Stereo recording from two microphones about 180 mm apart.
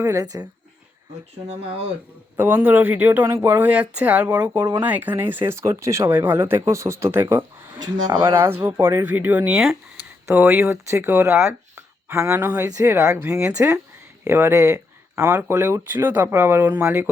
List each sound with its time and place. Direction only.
0.0 s speech: 20° right (ahead or behind)
2.3 s speech: 10° right (ahead or behind)
8.6 s speech: 10° right (ahead or behind)